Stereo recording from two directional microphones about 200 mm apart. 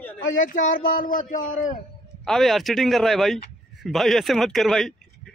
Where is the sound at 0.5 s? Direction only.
45° left (ahead or behind).